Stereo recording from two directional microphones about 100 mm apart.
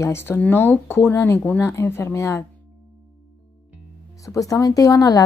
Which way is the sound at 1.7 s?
30° left (ahead or behind).